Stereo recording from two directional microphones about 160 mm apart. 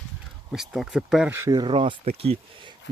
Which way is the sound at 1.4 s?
25° right (ahead or behind).